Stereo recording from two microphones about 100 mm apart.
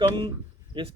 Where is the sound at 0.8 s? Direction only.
60° right (ahead or behind).